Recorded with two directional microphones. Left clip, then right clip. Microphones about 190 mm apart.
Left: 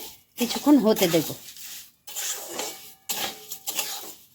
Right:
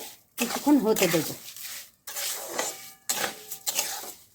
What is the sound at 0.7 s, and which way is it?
Speech, 50° left (ahead or behind).